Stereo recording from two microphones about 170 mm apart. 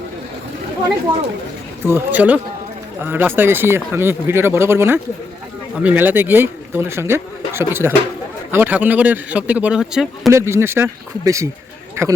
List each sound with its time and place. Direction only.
1.8 s speech: 15° right (ahead or behind)
10.2 s a man's voice: 15° right (ahead or behind)